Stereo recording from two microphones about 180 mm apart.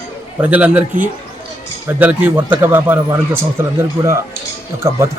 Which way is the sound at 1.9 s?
10° right (ahead or behind).